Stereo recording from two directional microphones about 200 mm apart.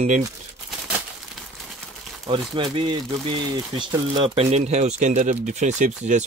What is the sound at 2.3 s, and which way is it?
Speech, 25° right (ahead or behind).